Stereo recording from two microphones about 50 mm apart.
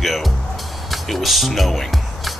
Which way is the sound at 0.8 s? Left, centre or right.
Centre.